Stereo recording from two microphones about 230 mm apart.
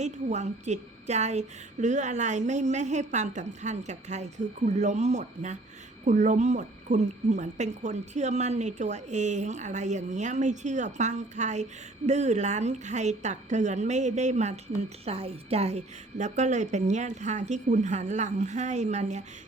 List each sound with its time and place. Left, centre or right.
0.0 s speech: right